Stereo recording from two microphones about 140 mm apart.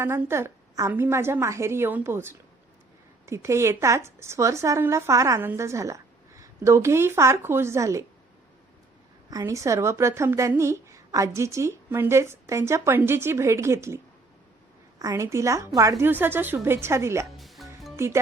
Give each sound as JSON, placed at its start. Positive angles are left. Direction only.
{"t": 0.0, "sound": "a woman's voice", "side_deg": -20}
{"t": 9.3, "sound": "a woman's voice", "side_deg": -20}
{"t": 17.3, "sound": "music", "side_deg": 0}
{"t": 17.9, "sound": "speech", "side_deg": -20}